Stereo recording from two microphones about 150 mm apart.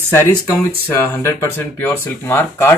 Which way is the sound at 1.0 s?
15° left (ahead or behind).